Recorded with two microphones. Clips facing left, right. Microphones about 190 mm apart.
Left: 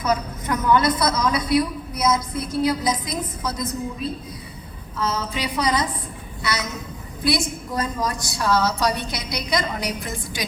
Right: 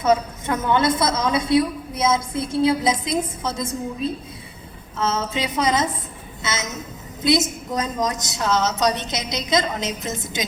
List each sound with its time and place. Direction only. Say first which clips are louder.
0.0 s a woman's voice: right 4 dB; 25° right (ahead or behind)
4.9 s a woman's voice: right 2 dB; 25° right (ahead or behind)